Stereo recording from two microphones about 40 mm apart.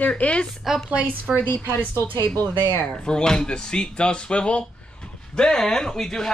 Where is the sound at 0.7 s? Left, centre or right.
Centre.